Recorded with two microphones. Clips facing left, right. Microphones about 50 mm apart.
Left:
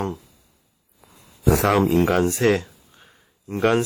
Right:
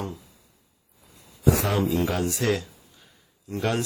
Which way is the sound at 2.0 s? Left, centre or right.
Left.